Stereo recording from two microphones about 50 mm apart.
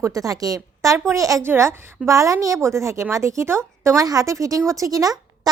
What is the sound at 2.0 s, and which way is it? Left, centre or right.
A woman's voice, right.